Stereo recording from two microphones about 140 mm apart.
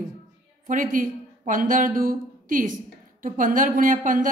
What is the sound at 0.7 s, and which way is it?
Speech, 65° right (ahead or behind).